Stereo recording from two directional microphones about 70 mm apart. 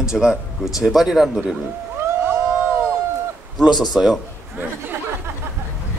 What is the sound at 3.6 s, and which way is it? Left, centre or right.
Speech, left.